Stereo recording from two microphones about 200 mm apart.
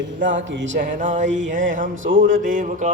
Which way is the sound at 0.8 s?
40° right (ahead or behind).